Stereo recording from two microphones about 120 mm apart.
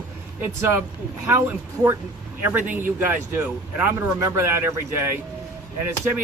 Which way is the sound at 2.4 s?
15° right (ahead or behind).